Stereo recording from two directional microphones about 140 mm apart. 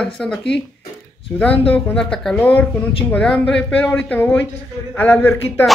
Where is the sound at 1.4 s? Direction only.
10° left (ahead or behind).